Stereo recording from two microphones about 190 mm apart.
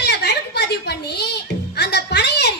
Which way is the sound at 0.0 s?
60° left (ahead or behind).